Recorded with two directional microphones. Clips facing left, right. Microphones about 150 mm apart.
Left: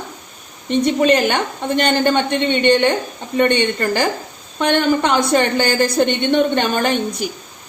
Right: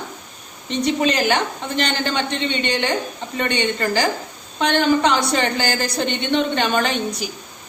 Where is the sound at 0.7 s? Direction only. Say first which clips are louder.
Left 5 dB; 50° left (ahead or behind).